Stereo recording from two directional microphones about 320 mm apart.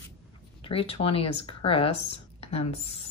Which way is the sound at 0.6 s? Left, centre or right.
Centre.